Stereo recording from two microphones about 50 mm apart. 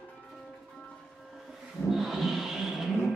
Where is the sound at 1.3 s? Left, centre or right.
Centre.